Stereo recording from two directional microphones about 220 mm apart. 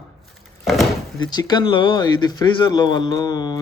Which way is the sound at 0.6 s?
Centre (ahead or behind).